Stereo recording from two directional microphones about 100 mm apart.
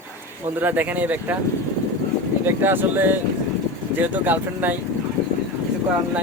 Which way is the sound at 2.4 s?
20° right (ahead or behind).